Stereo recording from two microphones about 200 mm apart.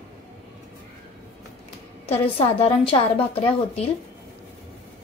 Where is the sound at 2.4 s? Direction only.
25° left (ahead or behind).